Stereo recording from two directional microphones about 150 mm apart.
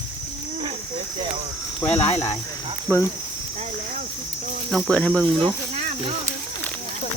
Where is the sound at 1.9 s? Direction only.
45° left (ahead or behind).